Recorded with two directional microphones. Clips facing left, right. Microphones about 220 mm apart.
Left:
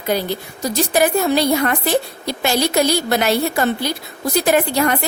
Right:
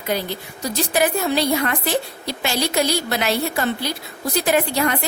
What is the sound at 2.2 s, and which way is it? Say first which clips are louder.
Speech: left 4 dB; 45° left (ahead or behind).